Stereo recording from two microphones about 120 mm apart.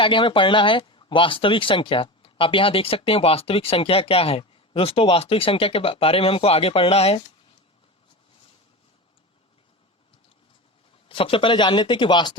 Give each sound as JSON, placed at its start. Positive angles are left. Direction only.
{"t": 0.0, "sound": "speech", "side_deg": 45}
{"t": 11.1, "sound": "speech", "side_deg": 45}